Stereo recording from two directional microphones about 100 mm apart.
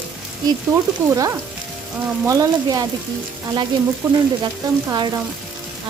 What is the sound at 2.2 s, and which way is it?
Speech, 35° right (ahead or behind).